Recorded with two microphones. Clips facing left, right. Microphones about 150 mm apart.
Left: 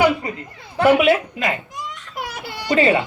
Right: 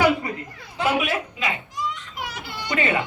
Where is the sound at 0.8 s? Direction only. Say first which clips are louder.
Left 9 dB; 65° left (ahead or behind).